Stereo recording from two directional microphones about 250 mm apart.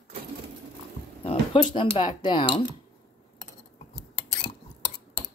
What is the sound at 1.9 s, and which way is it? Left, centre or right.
Speech, centre.